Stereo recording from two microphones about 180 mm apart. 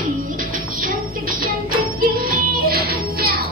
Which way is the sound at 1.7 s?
55° right (ahead or behind).